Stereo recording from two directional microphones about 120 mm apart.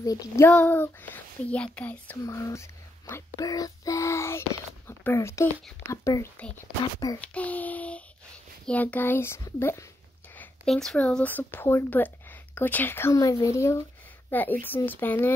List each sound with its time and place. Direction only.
0.0 s a child's voice: 30° left (ahead or behind)
0.5 s speech: 15° left (ahead or behind)
2.2 s a child's voice: 25° left (ahead or behind)
7.2 s child singing: 10° left (ahead or behind)
8.6 s a child's voice: 15° left (ahead or behind)
10.3 s a sound: 15° left (ahead or behind)
10.7 s a child's voice: 5° left (ahead or behind)